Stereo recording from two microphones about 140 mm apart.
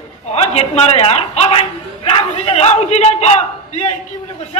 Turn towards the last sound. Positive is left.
turn(degrees=50)  # may be behind; listen again after turning